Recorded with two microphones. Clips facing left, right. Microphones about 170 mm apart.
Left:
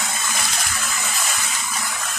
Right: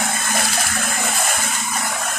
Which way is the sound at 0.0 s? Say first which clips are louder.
Right 5 dB; 55° right (ahead or behind).